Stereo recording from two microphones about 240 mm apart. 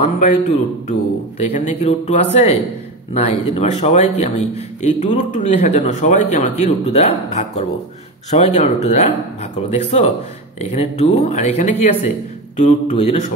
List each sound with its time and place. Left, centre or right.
0.2 s a man's voice: left